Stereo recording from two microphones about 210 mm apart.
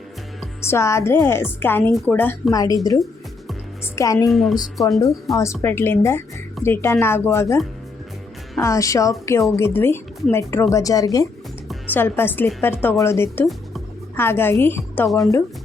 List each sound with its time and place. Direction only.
0.7 s a woman's voice: 15° left (ahead or behind)
3.9 s a woman's voice: 15° left (ahead or behind)
4.3 s speech: centre (ahead or behind)
5.4 s a woman's voice: 10° left (ahead or behind)
8.6 s a woman's voice: 15° left (ahead or behind)